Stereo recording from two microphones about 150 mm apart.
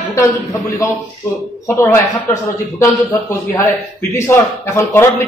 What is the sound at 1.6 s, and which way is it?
A man's voice, 20° left (ahead or behind).